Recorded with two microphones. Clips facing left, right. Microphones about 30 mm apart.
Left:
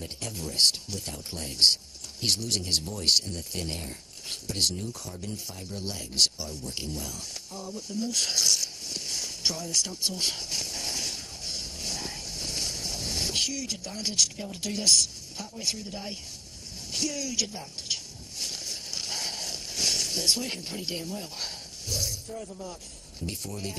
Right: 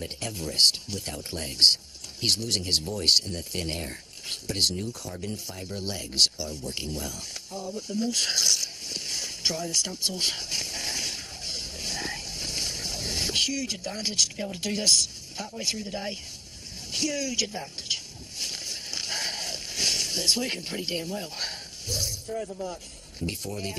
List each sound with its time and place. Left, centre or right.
0.0 s speech: right
10.8 s vehicle: right
15.4 s speech: right
17.8 s a sound: right
23.2 s speech: right